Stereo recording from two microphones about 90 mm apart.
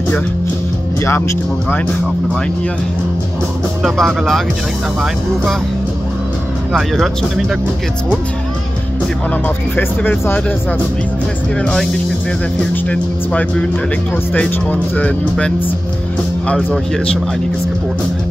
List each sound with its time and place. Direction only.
3.8 s speech: centre (ahead or behind)
9.8 s speech: 20° left (ahead or behind)
12.9 s speech: 10° left (ahead or behind)